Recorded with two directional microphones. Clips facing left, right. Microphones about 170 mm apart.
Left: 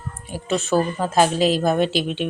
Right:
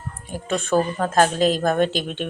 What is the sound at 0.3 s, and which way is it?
A woman's voice, 5° left (ahead or behind).